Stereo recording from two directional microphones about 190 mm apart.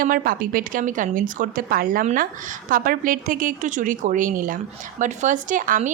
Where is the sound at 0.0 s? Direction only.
50° right (ahead or behind).